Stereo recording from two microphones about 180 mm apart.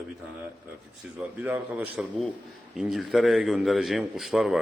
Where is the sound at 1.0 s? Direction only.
5° right (ahead or behind).